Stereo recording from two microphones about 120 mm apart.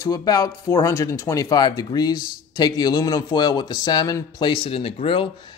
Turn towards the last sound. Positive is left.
turn(degrees=50)  # may be behind; listen again after turning